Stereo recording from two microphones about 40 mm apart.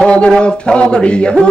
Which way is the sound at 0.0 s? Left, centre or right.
Left.